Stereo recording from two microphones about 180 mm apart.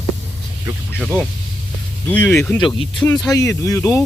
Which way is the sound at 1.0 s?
5° left (ahead or behind).